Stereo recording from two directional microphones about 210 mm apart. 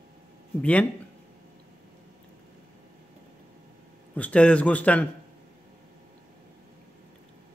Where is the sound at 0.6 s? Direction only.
5° left (ahead or behind).